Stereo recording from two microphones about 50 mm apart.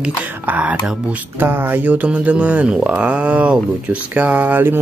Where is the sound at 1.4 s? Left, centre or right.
Right.